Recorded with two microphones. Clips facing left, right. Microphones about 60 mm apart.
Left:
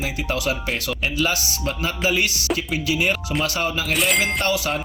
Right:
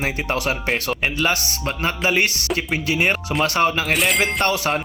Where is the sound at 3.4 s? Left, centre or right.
Right.